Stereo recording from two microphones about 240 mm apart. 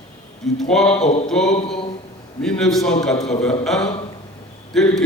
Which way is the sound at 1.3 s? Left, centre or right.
Centre.